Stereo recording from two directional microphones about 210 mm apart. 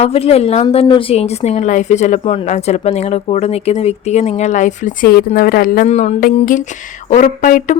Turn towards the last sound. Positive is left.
turn(degrees=40)  # may be behind; listen again after turning